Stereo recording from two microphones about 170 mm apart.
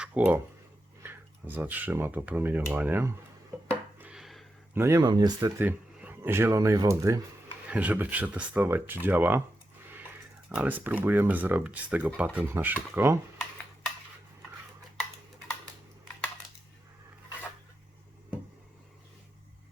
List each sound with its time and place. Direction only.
0.0 s speech: 10° right (ahead or behind)
3.9 s a sound: 5° right (ahead or behind)
4.7 s speech: 15° right (ahead or behind)
5.5 s speech: 10° right (ahead or behind)
7.7 s speech: 10° right (ahead or behind)
10.5 s speech: 10° right (ahead or behind)